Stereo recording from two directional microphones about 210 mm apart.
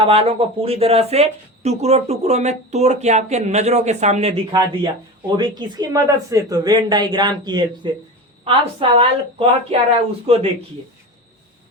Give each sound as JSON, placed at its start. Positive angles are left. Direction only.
{"t": 0.0, "sound": "a woman's voice", "side_deg": -25}